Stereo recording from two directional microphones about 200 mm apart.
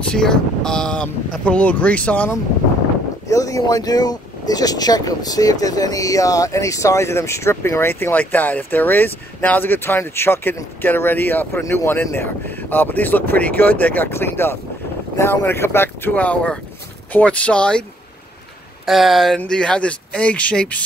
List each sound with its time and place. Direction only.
0.0 s speech: 5° left (ahead or behind)
18.9 s speech: centre (ahead or behind)